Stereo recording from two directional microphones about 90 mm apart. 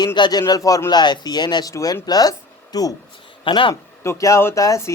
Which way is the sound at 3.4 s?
65° left (ahead or behind).